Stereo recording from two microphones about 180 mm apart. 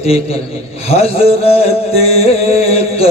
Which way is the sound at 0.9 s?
35° left (ahead or behind).